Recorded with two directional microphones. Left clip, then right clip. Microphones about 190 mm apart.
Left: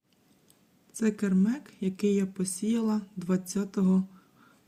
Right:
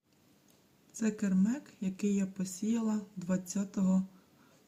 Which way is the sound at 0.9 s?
15° left (ahead or behind).